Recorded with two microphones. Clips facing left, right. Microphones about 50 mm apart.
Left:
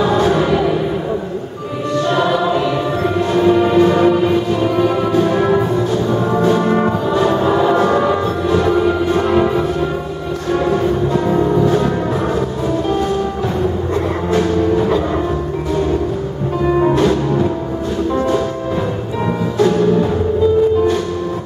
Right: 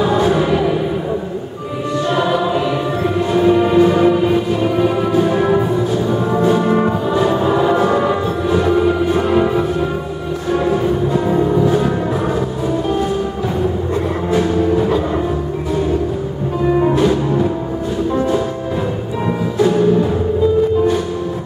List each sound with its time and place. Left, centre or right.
0.0 s music: centre
2.0 s choir: centre
3.3 s music: centre
14.3 s music: centre
16.9 s music: centre
19.6 s music: centre